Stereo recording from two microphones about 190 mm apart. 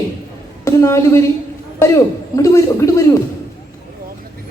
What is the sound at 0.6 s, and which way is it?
Speech, 15° left (ahead or behind).